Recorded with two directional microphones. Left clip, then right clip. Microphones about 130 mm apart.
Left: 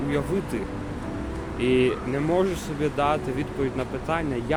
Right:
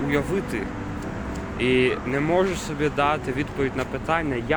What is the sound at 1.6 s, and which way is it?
Speech, 20° left (ahead or behind).